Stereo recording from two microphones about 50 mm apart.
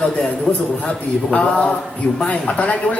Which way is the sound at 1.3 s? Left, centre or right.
Left.